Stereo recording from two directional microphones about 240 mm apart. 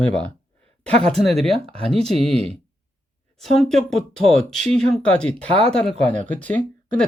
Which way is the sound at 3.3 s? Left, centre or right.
Centre.